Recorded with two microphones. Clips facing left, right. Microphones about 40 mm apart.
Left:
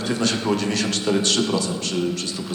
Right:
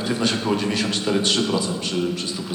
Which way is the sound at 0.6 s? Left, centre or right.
Centre.